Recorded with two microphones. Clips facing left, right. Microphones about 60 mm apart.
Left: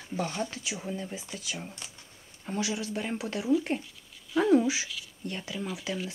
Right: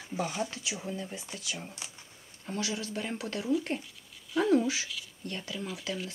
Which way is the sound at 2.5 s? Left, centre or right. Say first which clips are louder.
Left 3 dB; centre.